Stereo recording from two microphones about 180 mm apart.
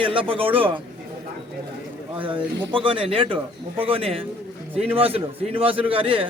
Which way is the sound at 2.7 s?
30° right (ahead or behind).